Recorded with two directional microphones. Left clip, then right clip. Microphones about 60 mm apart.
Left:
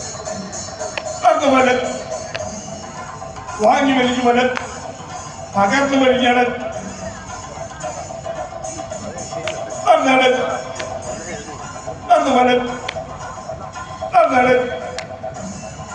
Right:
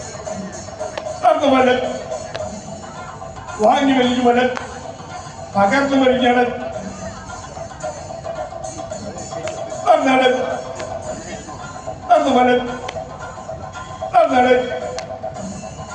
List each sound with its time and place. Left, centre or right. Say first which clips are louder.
1.0 s music: even; right
3.7 s a man's voice: left 1 dB; right
5.5 s a man's voice: even; right
9.8 s a man's voice: left 1 dB; right
12.0 s a sound: even; right
14.2 s a sound: even; right